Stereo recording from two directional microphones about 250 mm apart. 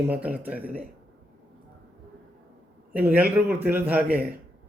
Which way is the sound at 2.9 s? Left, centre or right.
Centre.